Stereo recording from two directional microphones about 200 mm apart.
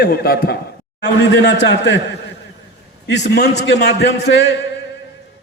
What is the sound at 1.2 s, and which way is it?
Speech, 60° left (ahead or behind).